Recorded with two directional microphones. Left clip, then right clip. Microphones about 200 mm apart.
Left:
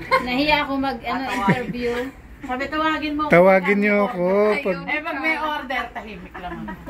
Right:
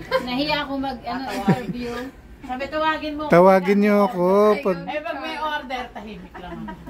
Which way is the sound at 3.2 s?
10° right (ahead or behind).